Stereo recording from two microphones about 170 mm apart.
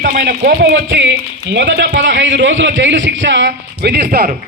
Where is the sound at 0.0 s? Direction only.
65° right (ahead or behind).